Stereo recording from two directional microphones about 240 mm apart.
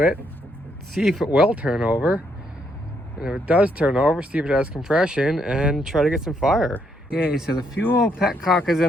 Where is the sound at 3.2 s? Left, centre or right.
Centre.